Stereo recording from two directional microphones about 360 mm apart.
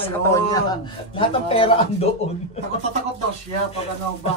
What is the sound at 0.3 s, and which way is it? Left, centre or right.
A man's voice, centre.